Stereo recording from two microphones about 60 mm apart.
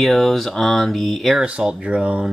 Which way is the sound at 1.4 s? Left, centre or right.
Centre.